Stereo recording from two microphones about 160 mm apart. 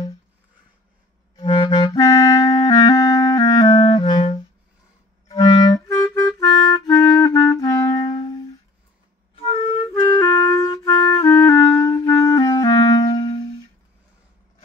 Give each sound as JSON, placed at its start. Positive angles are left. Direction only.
{"t": 1.3, "sound": "clarinet", "side_deg": 35}
{"t": 2.0, "sound": "clarinet", "side_deg": 20}
{"t": 9.3, "sound": "music", "side_deg": 35}
{"t": 10.1, "sound": "music", "side_deg": 25}